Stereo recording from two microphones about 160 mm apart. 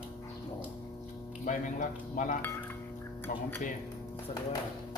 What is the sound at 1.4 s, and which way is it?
Speech, 55° left (ahead or behind).